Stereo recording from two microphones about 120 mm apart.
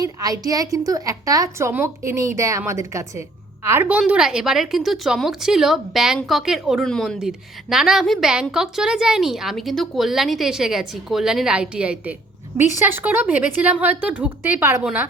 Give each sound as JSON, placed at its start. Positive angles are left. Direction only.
{"t": 0.0, "sound": "a woman's voice", "side_deg": -30}
{"t": 3.8, "sound": "a woman's voice", "side_deg": -10}